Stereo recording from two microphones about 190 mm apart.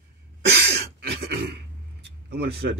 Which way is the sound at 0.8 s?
60° right (ahead or behind).